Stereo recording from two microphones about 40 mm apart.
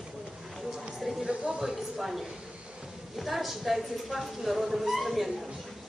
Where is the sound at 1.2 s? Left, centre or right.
Right.